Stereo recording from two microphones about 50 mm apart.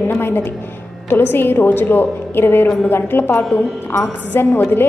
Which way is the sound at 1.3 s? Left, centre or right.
Left.